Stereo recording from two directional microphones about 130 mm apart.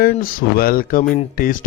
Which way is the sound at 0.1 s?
90° left.